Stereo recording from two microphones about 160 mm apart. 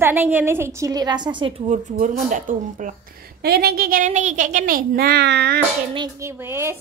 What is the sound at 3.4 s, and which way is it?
A child's voice, 80° right.